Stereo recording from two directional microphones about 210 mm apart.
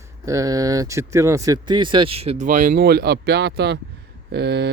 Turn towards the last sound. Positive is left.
turn(degrees=-55)  # may be behind; listen again after turning